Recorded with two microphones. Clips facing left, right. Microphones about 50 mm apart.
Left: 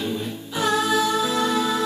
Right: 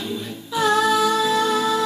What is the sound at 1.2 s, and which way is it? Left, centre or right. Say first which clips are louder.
Music: right 2 dB; left.